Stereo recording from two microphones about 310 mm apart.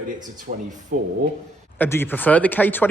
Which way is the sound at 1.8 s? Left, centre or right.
Centre.